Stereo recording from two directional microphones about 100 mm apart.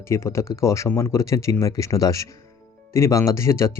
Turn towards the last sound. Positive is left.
turn(degrees=30)  # may be behind; listen again after turning